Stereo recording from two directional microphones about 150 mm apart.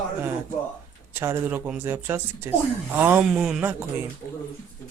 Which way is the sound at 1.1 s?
15° right (ahead or behind).